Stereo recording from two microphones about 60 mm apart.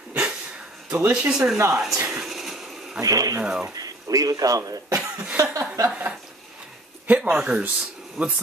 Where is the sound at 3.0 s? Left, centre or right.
Right.